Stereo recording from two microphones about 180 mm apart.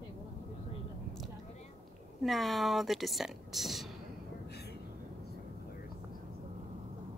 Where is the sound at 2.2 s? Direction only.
Centre (ahead or behind).